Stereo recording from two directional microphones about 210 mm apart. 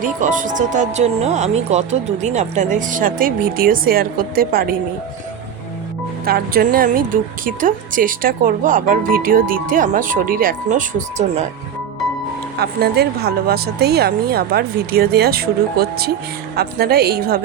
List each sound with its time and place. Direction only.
0.0 s speech: 40° right (ahead or behind)
6.2 s speech: 45° right (ahead or behind)
12.5 s speech: 50° right (ahead or behind)